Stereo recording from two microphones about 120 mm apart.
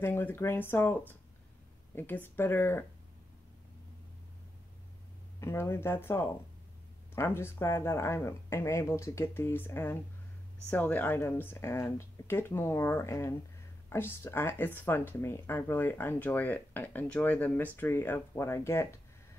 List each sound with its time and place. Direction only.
0.0 s speech: 20° left (ahead or behind)
5.4 s speech: 20° left (ahead or behind)